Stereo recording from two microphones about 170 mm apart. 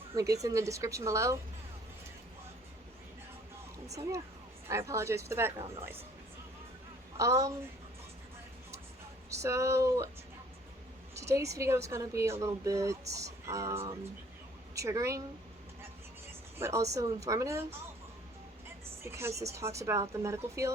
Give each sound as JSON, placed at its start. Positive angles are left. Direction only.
{"t": 0.1, "sound": "speech", "side_deg": -20}
{"t": 4.7, "sound": "speech", "side_deg": -15}
{"t": 7.2, "sound": "speech", "side_deg": -20}
{"t": 9.3, "sound": "speech", "side_deg": -15}
{"t": 11.1, "sound": "speech", "side_deg": -15}
{"t": 16.6, "sound": "speech", "side_deg": -15}
{"t": 19.0, "sound": "speech", "side_deg": -15}